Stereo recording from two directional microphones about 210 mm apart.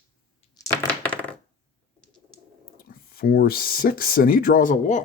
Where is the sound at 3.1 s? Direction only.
45° left (ahead or behind).